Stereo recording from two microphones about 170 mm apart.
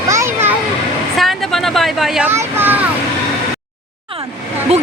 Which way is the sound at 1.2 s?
Centre (ahead or behind).